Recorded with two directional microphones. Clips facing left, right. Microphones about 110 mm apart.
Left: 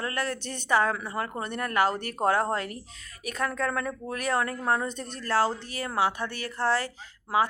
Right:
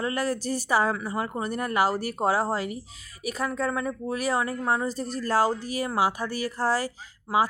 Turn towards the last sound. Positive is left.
turn(degrees=-10)  # may be behind; listen again after turning